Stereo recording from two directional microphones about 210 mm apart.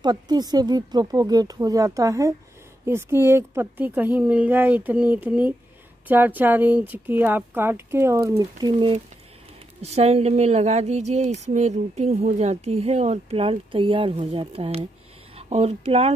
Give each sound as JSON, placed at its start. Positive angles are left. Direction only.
{"t": 0.0, "sound": "a woman's voice", "side_deg": -20}